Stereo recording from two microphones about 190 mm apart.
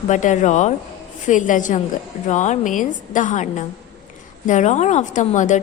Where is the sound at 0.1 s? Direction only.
40° left (ahead or behind).